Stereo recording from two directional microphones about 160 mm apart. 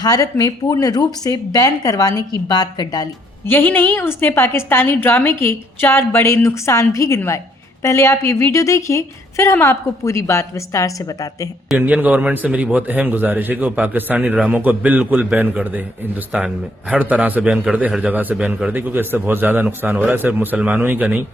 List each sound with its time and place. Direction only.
0.0 s speech: 20° left (ahead or behind)
11.7 s a man's voice: 10° right (ahead or behind)